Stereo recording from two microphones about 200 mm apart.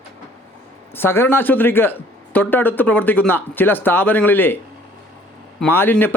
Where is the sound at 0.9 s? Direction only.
10° left (ahead or behind).